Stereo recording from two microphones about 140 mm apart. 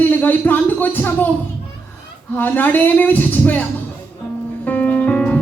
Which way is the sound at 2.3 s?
15° left (ahead or behind).